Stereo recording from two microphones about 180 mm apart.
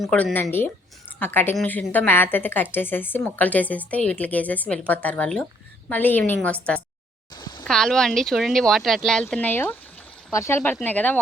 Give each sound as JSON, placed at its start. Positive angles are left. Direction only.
{"t": 0.0, "sound": "a woman's voice", "side_deg": 0}
{"t": 7.3, "sound": "a sound", "side_deg": 25}
{"t": 7.6, "sound": "a woman's voice", "side_deg": 5}